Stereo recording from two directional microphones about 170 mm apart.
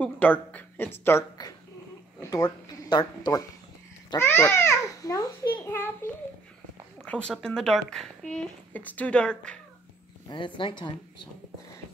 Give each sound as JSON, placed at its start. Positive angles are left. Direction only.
{"t": 0.0, "sound": "a woman's voice", "side_deg": 10}
{"t": 4.2, "sound": "babbling", "side_deg": 10}
{"t": 7.1, "sound": "speech", "side_deg": 5}
{"t": 10.3, "sound": "speech", "side_deg": 30}